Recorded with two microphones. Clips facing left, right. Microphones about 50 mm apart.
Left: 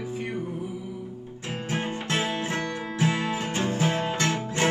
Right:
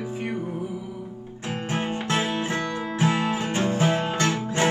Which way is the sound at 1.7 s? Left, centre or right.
Right.